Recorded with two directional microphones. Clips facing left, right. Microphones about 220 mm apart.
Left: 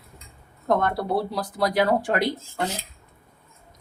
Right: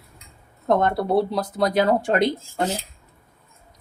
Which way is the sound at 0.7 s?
25° right (ahead or behind).